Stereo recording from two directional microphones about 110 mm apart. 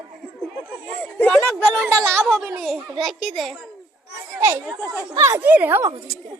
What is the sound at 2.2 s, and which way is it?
A woman's voice, 5° left (ahead or behind).